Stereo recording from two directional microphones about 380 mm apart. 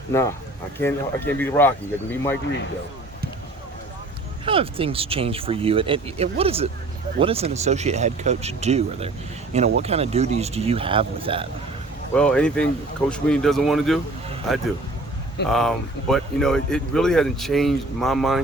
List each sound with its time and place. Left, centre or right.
0.8 s speech: centre
4.4 s speech: centre
12.1 s speech: centre